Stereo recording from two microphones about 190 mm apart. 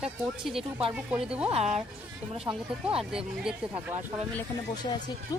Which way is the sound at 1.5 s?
35° right (ahead or behind).